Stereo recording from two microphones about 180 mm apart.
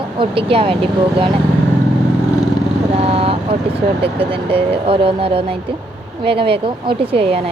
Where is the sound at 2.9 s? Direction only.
35° right (ahead or behind).